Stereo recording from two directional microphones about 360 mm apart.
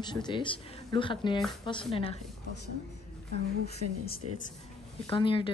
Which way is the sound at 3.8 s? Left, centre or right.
Right.